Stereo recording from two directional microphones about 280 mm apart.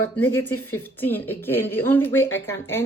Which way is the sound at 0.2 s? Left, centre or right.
Centre.